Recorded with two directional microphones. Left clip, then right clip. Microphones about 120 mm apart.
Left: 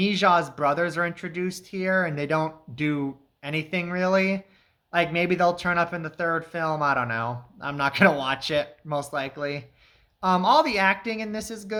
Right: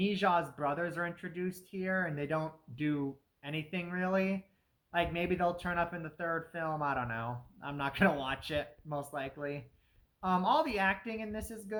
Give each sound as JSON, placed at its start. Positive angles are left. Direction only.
{"t": 0.0, "sound": "a woman's voice", "side_deg": 30}